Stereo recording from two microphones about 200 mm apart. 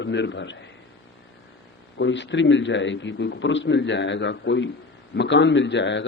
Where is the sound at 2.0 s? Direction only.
65° left (ahead or behind).